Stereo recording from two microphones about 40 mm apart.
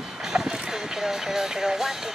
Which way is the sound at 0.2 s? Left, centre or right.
Centre.